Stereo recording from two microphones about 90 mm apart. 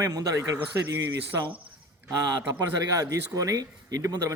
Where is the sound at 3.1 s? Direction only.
40° right (ahead or behind).